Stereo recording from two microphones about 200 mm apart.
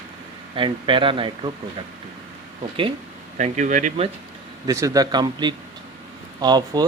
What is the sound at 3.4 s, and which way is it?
Speech, 35° right (ahead or behind).